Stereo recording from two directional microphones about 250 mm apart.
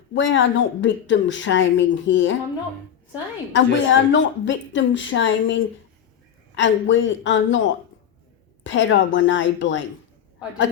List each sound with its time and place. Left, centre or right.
0.1 s speech: left
3.5 s speech: left
8.6 s speech: left